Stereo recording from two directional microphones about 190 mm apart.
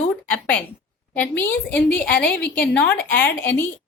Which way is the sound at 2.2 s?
55° left (ahead or behind).